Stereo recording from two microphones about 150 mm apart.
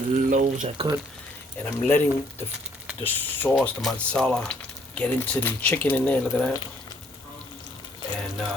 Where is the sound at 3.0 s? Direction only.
10° left (ahead or behind).